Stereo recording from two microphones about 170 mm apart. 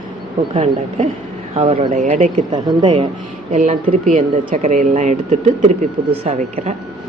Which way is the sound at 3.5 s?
45° right (ahead or behind).